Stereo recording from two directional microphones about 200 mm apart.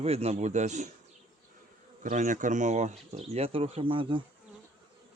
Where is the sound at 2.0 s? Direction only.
40° right (ahead or behind).